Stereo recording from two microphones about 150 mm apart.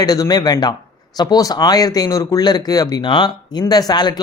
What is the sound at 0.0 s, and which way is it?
Speech, 25° left (ahead or behind).